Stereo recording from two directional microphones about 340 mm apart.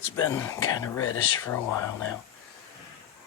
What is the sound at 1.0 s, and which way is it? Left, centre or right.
Speech, left.